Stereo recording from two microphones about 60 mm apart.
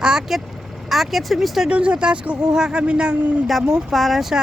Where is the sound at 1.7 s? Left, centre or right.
Centre.